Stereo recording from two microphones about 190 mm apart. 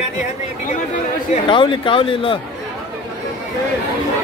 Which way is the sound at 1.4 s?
25° left (ahead or behind).